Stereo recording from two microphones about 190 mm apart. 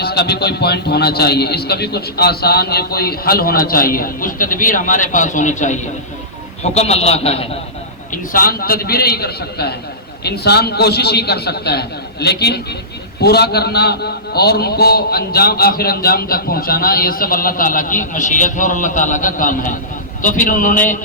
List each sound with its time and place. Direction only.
0.0 s a man's voice: 60° left (ahead or behind); by 7.4 s 30° left (ahead or behind)
8.1 s a man's voice: 45° left (ahead or behind)